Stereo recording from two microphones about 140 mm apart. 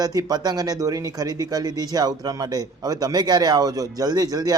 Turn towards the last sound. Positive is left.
turn(degrees=-25)  # may be behind; listen again after turning